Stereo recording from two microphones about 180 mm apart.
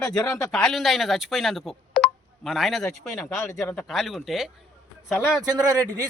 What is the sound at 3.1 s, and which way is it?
Speech, 15° left (ahead or behind).